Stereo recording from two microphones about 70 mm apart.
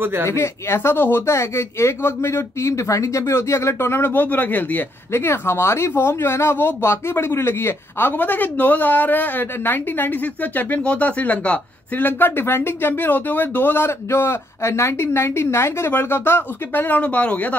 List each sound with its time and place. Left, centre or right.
0.0 s speech: right
0.3 s speech: left
5.1 s speech: left